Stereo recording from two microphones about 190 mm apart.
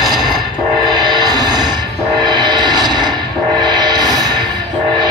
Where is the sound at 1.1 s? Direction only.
20° right (ahead or behind).